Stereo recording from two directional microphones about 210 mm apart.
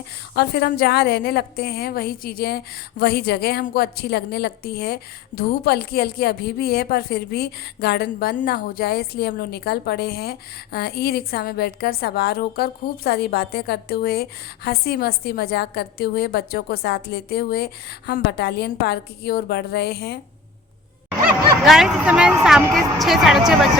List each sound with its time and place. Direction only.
0.3 s a woman's voice: 50° left (ahead or behind)
21.6 s speech: centre (ahead or behind)